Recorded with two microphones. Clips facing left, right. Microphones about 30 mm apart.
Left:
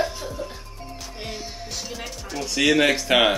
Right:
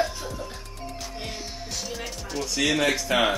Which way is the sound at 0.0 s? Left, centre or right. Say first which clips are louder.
Left 1 dB; centre.